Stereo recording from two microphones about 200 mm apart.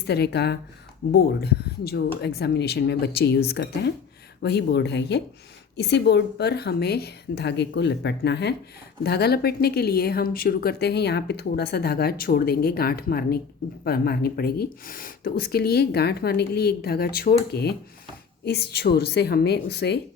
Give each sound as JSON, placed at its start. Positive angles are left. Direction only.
{"t": 0.1, "sound": "speech", "side_deg": 55}